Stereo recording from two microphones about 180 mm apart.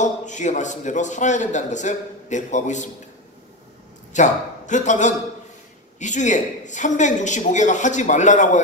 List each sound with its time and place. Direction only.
0.0 s a man's voice: 40° left (ahead or behind)
4.1 s a man's voice: 40° left (ahead or behind)